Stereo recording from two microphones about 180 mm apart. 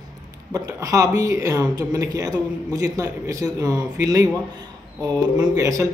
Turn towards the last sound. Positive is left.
turn(degrees=-20)  # may be behind; listen again after turning